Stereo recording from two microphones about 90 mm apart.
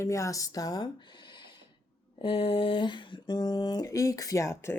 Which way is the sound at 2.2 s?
75° left (ahead or behind).